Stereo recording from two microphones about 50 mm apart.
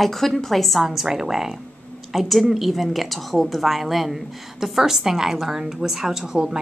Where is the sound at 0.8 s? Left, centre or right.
Centre.